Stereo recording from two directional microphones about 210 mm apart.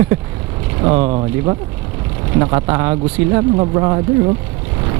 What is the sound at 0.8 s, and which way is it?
Speech, 25° right (ahead or behind).